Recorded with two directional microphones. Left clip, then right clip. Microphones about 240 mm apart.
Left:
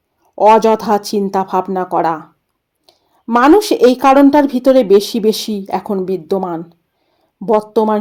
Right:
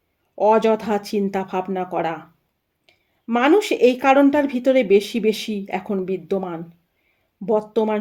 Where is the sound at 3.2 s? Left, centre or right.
Centre.